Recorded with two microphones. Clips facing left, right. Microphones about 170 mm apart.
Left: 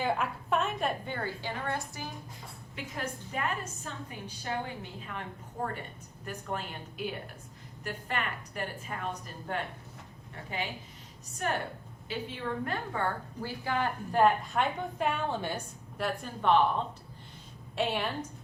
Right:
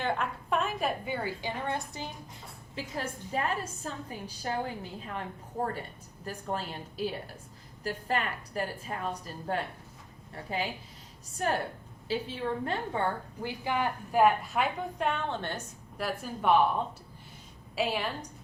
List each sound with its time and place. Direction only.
0.0 s a woman's voice: 5° left (ahead or behind); by 2.0 s 20° right (ahead or behind)
2.7 s a woman's voice: 30° right (ahead or behind)
12.0 s a woman's voice: 30° right (ahead or behind); by 15.6 s 10° left (ahead or behind)
16.0 s a woman's voice: 5° right (ahead or behind)
17.7 s a woman's voice: centre (ahead or behind)